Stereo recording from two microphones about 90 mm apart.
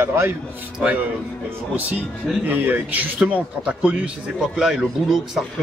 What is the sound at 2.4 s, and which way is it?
Speech, 20° right (ahead or behind).